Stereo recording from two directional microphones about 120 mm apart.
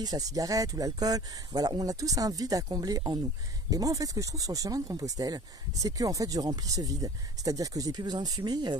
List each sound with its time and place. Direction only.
0.0 s speech: 30° right (ahead or behind)